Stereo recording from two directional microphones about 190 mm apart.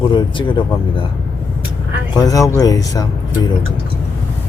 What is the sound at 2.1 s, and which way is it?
Speech, 20° left (ahead or behind).